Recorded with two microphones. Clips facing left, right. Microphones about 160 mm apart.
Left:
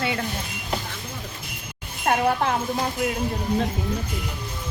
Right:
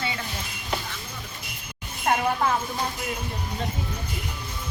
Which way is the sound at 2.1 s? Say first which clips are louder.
Left 2 dB; 55° left (ahead or behind).